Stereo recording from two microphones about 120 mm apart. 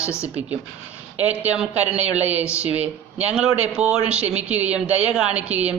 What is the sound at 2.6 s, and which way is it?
Speech, 10° right (ahead or behind).